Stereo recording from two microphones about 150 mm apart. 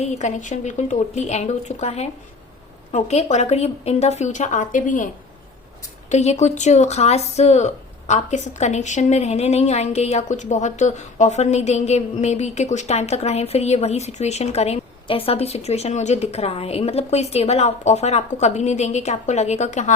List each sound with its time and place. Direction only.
0.0 s speech: 50° left (ahead or behind)
6.1 s speech: 50° left (ahead or behind)